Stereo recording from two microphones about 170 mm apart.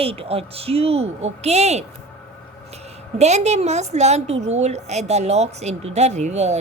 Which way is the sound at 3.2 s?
40° right (ahead or behind).